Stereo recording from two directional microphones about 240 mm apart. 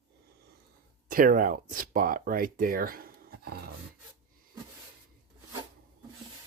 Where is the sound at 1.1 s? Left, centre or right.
Right.